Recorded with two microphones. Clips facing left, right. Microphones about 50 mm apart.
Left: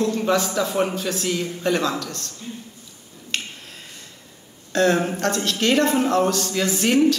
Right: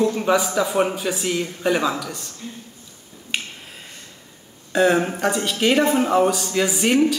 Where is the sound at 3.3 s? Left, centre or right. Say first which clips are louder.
Right 1 dB; centre.